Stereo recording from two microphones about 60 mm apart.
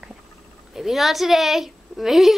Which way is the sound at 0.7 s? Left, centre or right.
Centre.